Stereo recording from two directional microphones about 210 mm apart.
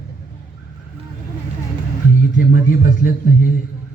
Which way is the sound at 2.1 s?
40° left (ahead or behind).